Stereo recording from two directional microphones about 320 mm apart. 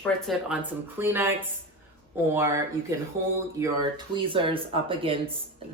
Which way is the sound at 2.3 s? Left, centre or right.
Centre.